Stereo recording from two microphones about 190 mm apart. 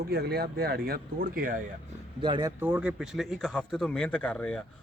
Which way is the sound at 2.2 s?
25° right (ahead or behind).